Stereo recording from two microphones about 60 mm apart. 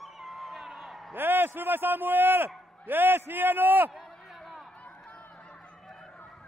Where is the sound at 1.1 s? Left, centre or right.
Right.